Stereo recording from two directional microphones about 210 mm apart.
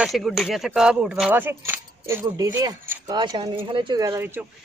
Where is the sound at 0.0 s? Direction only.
Centre (ahead or behind).